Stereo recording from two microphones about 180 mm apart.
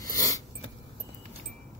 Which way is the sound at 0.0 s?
20° left (ahead or behind).